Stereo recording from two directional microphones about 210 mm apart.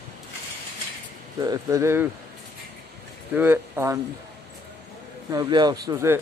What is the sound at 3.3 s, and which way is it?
Speech, 10° right (ahead or behind).